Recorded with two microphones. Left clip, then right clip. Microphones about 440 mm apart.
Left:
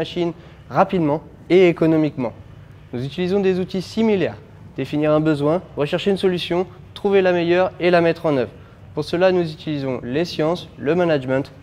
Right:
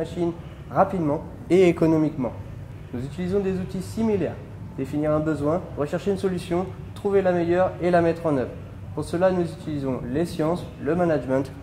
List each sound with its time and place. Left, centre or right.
0.2 s a man's voice: left
1.5 s speech: left
3.0 s speech: left
6.1 s speech: left